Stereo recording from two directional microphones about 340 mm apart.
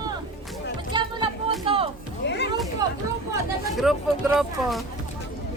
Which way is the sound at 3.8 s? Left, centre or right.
Centre.